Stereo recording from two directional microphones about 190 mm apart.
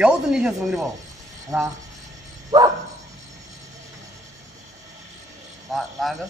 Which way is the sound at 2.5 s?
20° right (ahead or behind).